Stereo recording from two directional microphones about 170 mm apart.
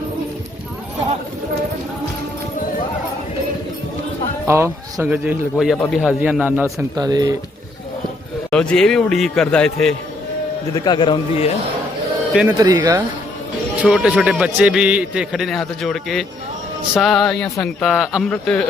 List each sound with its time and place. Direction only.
4.4 s speech: 15° right (ahead or behind)
6.9 s speech: 20° right (ahead or behind)
8.4 s a man's voice: 5° left (ahead or behind)
10.8 s speech: 25° left (ahead or behind)
12.5 s speech: 20° right (ahead or behind)
13.8 s a man's voice: 5° right (ahead or behind)